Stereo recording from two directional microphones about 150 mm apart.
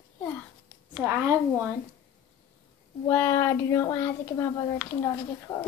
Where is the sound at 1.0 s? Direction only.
15° right (ahead or behind).